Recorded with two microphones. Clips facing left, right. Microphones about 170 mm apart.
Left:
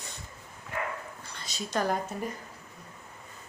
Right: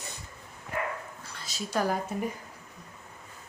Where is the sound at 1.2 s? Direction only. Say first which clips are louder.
Even; 5° right (ahead or behind).